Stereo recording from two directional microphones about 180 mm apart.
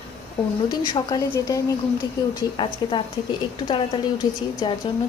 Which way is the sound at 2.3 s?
25° left (ahead or behind).